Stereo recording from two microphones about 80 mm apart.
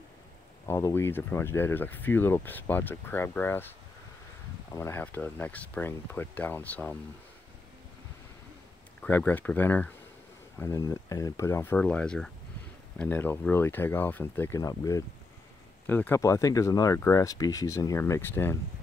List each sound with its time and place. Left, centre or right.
0.7 s speech: left
4.7 s speech: left
5.0 s speech: left
9.0 s speech: centre
10.8 s speech: left
11.7 s speech: centre
13.2 s speech: left
14.6 s speech: left
15.9 s speech: left
16.2 s speech: left